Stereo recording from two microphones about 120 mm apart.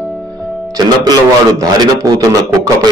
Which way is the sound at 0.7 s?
35° right (ahead or behind).